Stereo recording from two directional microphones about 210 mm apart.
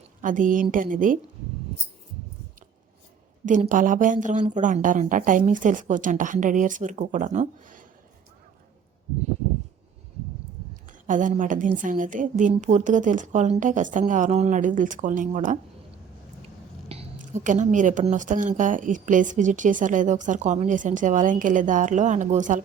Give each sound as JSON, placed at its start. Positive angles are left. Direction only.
{"t": 0.2, "sound": "a woman's voice", "side_deg": -40}
{"t": 3.4, "sound": "a woman's voice", "side_deg": -35}
{"t": 11.0, "sound": "a woman's voice", "side_deg": -40}
{"t": 16.9, "sound": "a woman's voice", "side_deg": -30}